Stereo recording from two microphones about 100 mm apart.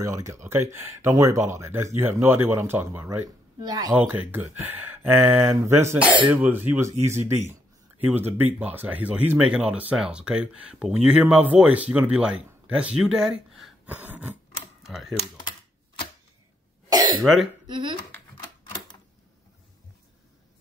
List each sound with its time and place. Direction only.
0.0 s speech: 30° right (ahead or behind)
3.6 s speech: 40° right (ahead or behind)
3.9 s speech: 15° right (ahead or behind)
13.8 s a sound: 15° right (ahead or behind)
14.8 s speech: 5° right (ahead or behind)
17.2 s speech: centre (ahead or behind)
17.6 s speech: 55° right (ahead or behind)
18.7 s typewriter: 45° left (ahead or behind)